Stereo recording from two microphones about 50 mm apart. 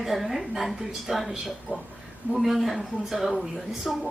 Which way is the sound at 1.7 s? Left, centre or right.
Right.